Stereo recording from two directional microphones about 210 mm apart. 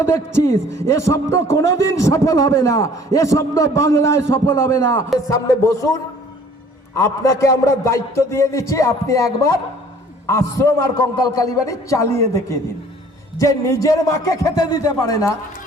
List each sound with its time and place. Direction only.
0.0 s a man's voice: 10° left (ahead or behind)